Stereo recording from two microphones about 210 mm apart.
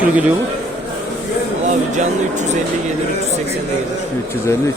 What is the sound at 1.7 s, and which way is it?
Speech, 35° right (ahead or behind).